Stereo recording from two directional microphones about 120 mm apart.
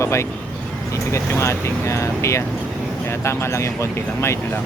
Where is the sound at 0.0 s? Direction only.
25° left (ahead or behind).